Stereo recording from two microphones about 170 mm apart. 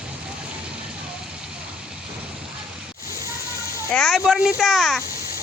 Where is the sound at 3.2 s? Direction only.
20° left (ahead or behind).